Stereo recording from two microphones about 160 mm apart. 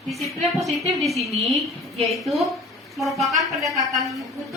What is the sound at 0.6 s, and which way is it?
A woman's voice, centre (ahead or behind).